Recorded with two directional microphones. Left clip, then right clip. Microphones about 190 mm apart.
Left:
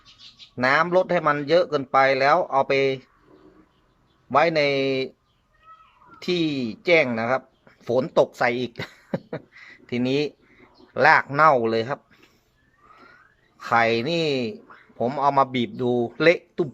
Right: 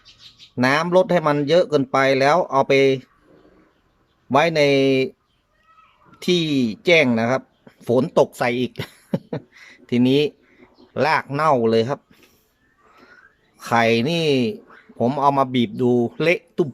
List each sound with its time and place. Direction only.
0.5 s speech: 15° right (ahead or behind)
4.3 s speech: 15° right (ahead or behind)
13.6 s speech: 15° right (ahead or behind)